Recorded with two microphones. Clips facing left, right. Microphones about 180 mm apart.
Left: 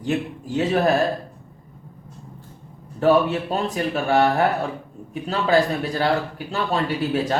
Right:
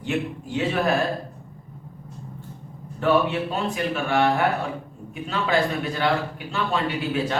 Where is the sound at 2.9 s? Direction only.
40° left (ahead or behind).